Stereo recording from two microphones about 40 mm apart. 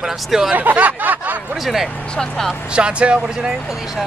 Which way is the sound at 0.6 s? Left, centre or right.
Right.